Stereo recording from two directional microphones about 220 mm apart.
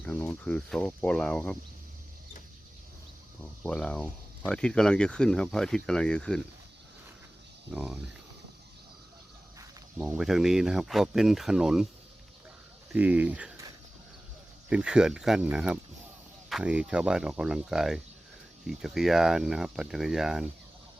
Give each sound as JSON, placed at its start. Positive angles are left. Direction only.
{"t": 0.0, "sound": "speech", "side_deg": 5}
{"t": 3.6, "sound": "speech", "side_deg": 5}
{"t": 7.7, "sound": "speech", "side_deg": 0}
{"t": 10.0, "sound": "speech", "side_deg": 0}
{"t": 12.9, "sound": "speech", "side_deg": -5}
{"t": 14.7, "sound": "speech", "side_deg": -5}